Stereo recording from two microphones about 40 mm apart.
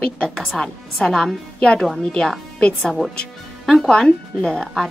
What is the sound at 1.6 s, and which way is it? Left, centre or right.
Speech, left.